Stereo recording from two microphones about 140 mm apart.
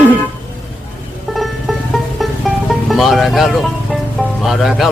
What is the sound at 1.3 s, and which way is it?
Music, centre (ahead or behind).